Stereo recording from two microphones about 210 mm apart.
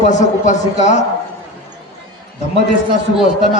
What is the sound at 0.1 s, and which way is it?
Speech, 35° left (ahead or behind).